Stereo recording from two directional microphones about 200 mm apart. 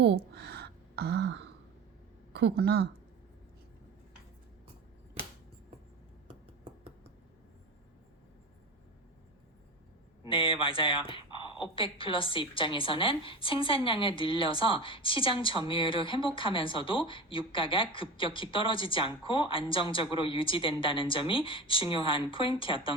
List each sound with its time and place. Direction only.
0.0 s a sound: 55° right (ahead or behind)
2.3 s speech: 55° right (ahead or behind)
10.2 s a woman's voice: 25° left (ahead or behind)